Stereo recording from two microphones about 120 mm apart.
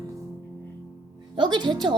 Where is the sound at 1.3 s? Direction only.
40° right (ahead or behind).